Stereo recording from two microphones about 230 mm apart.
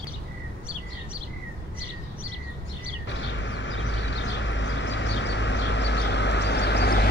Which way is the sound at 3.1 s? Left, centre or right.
Left.